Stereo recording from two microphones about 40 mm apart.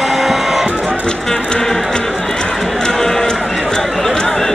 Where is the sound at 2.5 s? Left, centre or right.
Centre.